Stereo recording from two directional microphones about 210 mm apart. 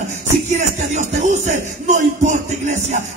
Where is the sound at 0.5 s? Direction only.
35° right (ahead or behind).